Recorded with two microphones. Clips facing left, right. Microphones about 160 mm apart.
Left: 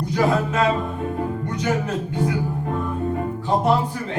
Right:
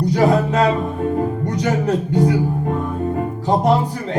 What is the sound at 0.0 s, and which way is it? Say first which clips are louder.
Music: right 5 dB; 40° right (ahead or behind).